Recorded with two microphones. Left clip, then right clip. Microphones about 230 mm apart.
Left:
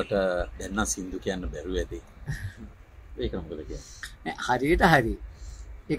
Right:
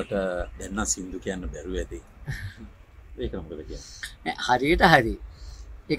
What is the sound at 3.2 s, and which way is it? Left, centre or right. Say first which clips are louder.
Speech: left 1 dB; centre.